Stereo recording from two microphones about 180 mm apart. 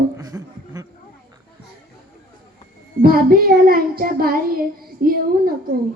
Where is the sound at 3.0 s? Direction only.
55° right (ahead or behind).